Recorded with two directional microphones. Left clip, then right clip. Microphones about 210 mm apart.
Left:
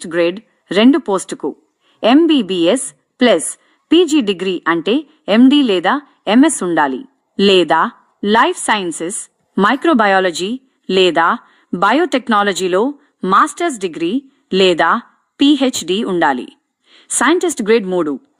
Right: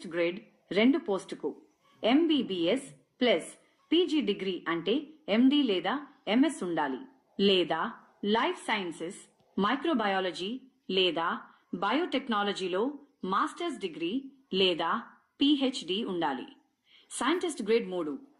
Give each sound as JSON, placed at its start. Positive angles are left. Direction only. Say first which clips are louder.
{"t": 0.0, "sound": "a woman's voice", "louder": "left 15 dB", "side_deg": 60}